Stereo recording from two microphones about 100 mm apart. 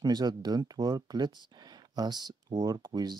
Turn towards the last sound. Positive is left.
turn(degrees=-40)  # may be behind; listen again after turning